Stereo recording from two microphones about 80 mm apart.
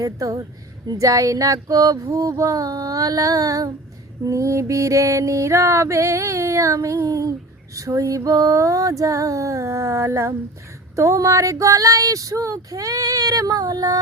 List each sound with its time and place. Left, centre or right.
0.0 s speech: right
4.2 s mantra: right
7.8 s speech: right